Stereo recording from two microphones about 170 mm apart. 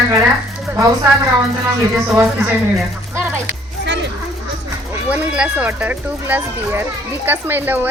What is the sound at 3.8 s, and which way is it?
Music, 90° right.